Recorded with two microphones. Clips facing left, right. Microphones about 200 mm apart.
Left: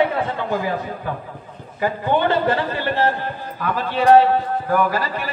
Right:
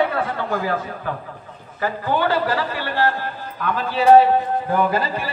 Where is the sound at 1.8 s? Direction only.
25° left (ahead or behind).